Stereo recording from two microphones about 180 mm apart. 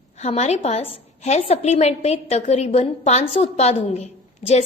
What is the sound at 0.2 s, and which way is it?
A woman's voice, 40° left (ahead or behind).